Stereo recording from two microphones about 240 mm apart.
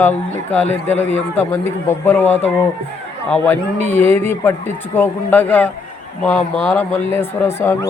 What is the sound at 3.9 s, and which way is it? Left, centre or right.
A man's voice, centre.